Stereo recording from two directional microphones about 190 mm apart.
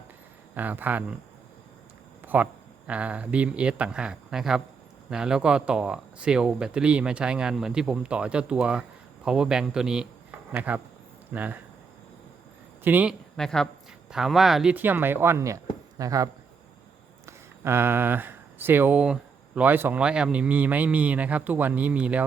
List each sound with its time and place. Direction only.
0.5 s speech: 10° right (ahead or behind)
2.2 s speech: 10° right (ahead or behind)
12.8 s speech: 10° right (ahead or behind)
13.3 s speech: 5° left (ahead or behind)